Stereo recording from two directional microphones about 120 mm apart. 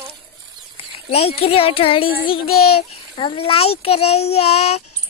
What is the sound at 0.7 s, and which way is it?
Speech, 55° left (ahead or behind).